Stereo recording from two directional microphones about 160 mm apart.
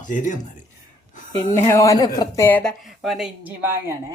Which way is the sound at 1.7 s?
20° left (ahead or behind).